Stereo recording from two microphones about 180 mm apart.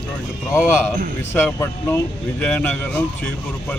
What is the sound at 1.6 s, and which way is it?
Speech, 15° left (ahead or behind).